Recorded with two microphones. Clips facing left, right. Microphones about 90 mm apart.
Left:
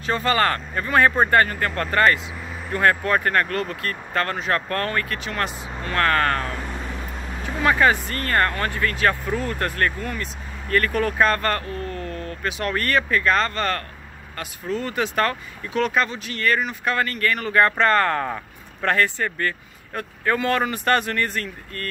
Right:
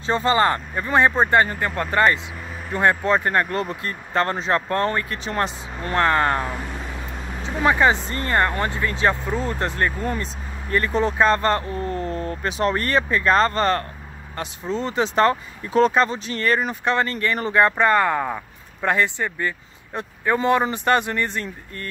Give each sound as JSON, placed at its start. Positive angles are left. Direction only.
{"t": 0.0, "sound": "speech", "side_deg": -25}